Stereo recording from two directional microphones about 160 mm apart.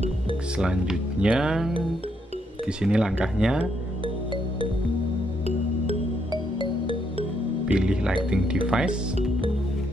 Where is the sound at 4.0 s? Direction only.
30° right (ahead or behind).